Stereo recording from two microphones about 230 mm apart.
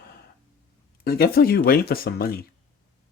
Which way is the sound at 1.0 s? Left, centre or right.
Left.